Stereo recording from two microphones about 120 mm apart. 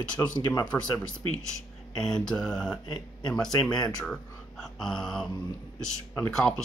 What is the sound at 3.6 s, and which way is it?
Speech, 35° left (ahead or behind).